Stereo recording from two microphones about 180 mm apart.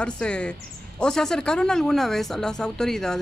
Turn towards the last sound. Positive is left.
turn(degrees=5)  # may be behind; listen again after turning